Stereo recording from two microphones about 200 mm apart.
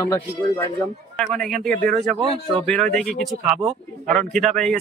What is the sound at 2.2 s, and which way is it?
Speech, 25° right (ahead or behind).